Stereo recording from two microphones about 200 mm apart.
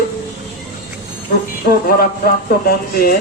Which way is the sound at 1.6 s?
50° left (ahead or behind).